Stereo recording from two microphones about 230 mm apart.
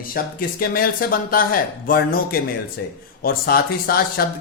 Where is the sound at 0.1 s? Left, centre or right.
Left.